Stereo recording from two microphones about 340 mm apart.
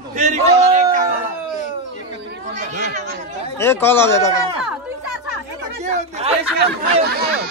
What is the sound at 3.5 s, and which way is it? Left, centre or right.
Speech, centre.